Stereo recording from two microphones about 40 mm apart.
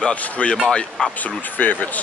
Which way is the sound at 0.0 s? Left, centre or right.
Left.